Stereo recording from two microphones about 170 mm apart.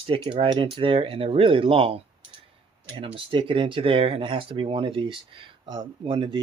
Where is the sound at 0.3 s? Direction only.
30° right (ahead or behind).